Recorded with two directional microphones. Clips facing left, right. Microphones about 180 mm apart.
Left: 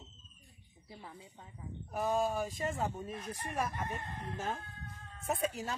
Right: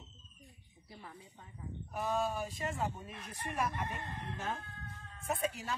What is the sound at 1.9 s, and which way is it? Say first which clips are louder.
Speech: left 3 dB; 45° left (ahead or behind).